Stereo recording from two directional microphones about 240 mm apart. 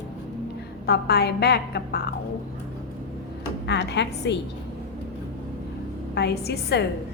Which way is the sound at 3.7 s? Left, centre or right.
Left.